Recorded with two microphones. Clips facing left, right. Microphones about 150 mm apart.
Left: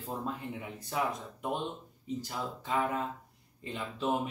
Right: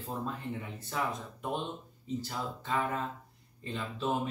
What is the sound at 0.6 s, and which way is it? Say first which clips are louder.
Speech: left 4 dB; 10° left (ahead or behind).